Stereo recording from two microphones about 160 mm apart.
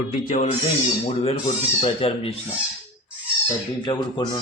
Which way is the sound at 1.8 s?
35° left (ahead or behind).